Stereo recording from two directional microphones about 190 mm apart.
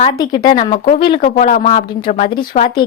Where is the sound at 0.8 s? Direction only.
50° left (ahead or behind); by 2.8 s 30° left (ahead or behind).